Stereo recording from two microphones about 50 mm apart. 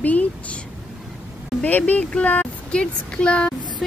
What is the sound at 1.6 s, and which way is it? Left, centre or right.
Speech, left.